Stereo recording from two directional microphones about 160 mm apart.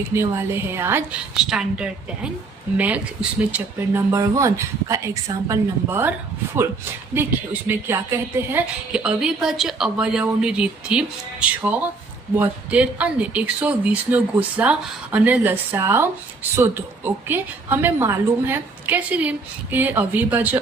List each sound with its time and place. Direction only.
0.1 s a woman's voice: 15° right (ahead or behind)